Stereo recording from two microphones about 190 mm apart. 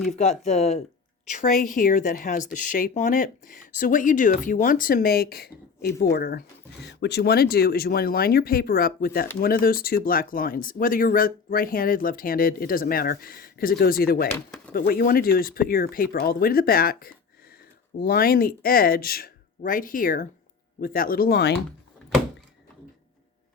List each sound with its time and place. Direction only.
0.2 s speech: 35° left (ahead or behind); by 6.4 s 50° left (ahead or behind)
6.8 s speech: 60° left (ahead or behind)
14.3 s speech: 10° left (ahead or behind)
14.7 s speech: 50° left (ahead or behind)